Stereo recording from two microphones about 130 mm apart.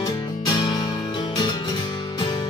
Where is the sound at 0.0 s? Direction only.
35° left (ahead or behind).